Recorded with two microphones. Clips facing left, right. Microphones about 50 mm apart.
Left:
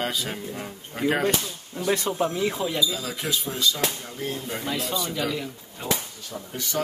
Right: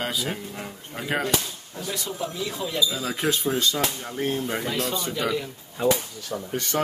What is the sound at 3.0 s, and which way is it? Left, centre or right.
Speech, right.